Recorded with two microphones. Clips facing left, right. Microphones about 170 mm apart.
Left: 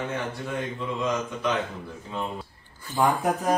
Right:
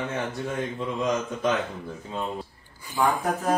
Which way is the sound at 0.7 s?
40° right (ahead or behind).